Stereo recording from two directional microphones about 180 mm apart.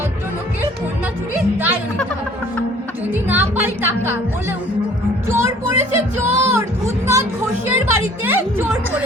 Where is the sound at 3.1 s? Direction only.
10° right (ahead or behind).